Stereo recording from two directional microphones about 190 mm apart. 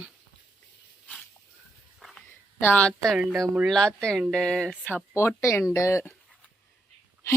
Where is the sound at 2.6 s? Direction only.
10° left (ahead or behind).